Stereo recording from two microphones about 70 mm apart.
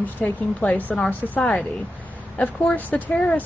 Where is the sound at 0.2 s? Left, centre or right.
Left.